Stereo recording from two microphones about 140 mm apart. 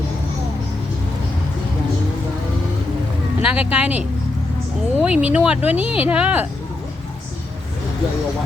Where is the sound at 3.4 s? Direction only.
10° right (ahead or behind).